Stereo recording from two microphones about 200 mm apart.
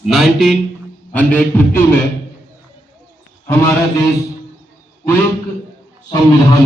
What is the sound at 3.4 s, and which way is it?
Speech, 15° left (ahead or behind).